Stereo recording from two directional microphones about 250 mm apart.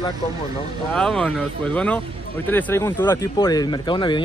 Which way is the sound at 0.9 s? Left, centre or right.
Centre.